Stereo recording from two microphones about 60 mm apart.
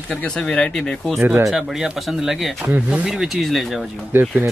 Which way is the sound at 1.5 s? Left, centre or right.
Centre.